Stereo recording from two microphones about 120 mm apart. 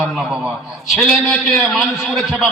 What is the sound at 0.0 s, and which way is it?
A man's voice, 5° right (ahead or behind).